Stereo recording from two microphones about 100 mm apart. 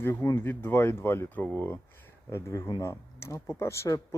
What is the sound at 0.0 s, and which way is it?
Speech, 20° left (ahead or behind).